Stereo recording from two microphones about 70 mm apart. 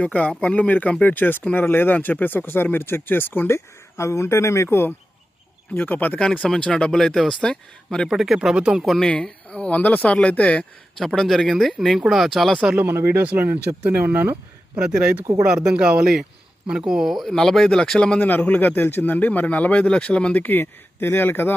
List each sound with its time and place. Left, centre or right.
0.0 s a man's voice: left
3.5 s speech: left
5.7 s a man's voice: left
6.1 s speech: centre
8.1 s speech: centre
9.0 s a man's voice: centre
11.0 s speech: centre
12.7 s speech: right
14.8 s speech: centre
18.2 s a man's voice: left